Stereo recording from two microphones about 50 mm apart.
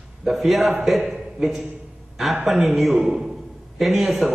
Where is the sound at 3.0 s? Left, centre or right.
Centre.